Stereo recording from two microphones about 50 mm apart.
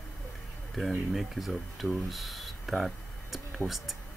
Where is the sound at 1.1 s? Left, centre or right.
Centre.